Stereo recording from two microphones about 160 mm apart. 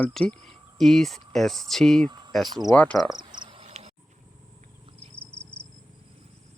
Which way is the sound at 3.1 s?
30° right (ahead or behind).